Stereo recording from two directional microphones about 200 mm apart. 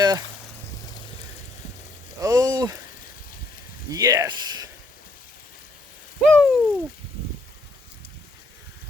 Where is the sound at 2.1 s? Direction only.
15° right (ahead or behind).